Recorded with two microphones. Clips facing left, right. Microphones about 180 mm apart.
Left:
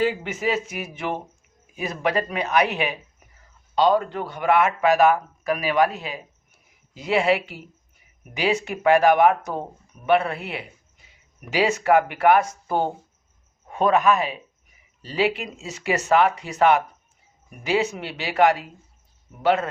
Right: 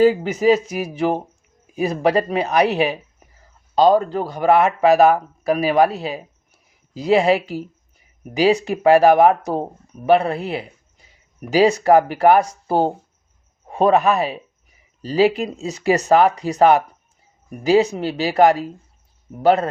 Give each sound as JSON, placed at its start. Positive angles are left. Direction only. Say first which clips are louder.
{"t": 0.0, "sound": "speech", "louder": "right 9 dB", "side_deg": -40}